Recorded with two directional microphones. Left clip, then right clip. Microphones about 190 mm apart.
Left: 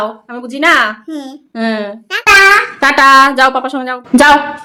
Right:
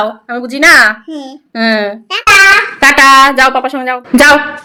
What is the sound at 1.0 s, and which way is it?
Speech, 15° left (ahead or behind).